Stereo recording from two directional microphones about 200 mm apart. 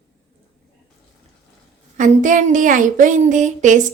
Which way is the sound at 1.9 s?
40° right (ahead or behind).